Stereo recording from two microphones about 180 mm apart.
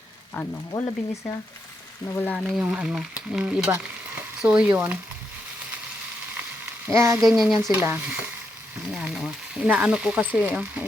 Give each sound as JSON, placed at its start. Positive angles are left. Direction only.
{"t": 0.4, "sound": "speech", "side_deg": 10}
{"t": 0.7, "sound": "frying", "side_deg": 20}
{"t": 2.1, "sound": "speech", "side_deg": 10}
{"t": 2.6, "sound": "speech", "side_deg": -5}
{"t": 6.9, "sound": "speech", "side_deg": -15}
{"t": 7.2, "sound": "speech", "side_deg": 0}